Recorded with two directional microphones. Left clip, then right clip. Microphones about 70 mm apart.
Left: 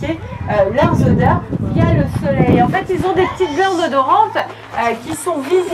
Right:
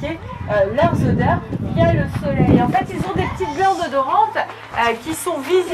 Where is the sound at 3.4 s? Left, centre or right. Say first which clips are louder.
Left 3 dB; left.